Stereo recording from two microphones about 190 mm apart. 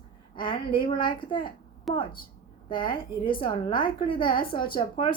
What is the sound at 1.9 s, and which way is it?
Speech, centre (ahead or behind).